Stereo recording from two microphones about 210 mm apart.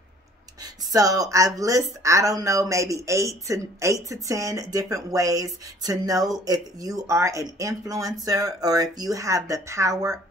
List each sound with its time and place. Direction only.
0.9 s speech: 15° right (ahead or behind)